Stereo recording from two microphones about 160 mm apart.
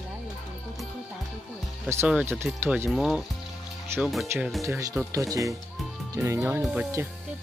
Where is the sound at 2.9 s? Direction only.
Centre (ahead or behind).